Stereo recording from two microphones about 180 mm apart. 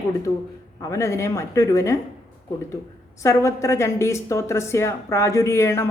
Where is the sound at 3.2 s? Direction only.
15° left (ahead or behind).